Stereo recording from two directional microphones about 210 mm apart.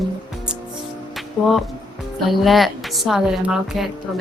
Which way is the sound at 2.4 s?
Centre (ahead or behind).